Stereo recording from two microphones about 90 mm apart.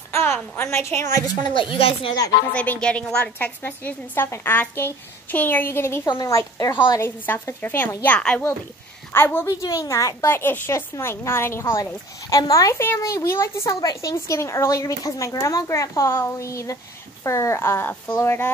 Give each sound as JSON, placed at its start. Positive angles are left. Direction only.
{"t": 0.1, "sound": "a woman's voice", "side_deg": 25}
{"t": 1.2, "sound": "speech", "side_deg": 45}
{"t": 1.6, "sound": "speech", "side_deg": 80}
{"t": 2.5, "sound": "a woman's voice", "side_deg": 15}
{"t": 3.3, "sound": "a woman's voice", "side_deg": 20}
{"t": 6.2, "sound": "speech", "side_deg": 35}
{"t": 7.0, "sound": "a woman's voice", "side_deg": 25}
{"t": 8.2, "sound": "a woman's voice", "side_deg": 10}
{"t": 9.1, "sound": "a woman's voice", "side_deg": 25}
{"t": 9.5, "sound": "a woman's voice", "side_deg": 40}